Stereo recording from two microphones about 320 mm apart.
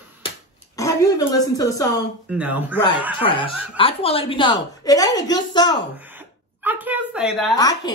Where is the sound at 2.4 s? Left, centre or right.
Centre.